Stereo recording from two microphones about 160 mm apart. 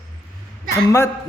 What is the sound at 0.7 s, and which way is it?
Speech, 15° left (ahead or behind).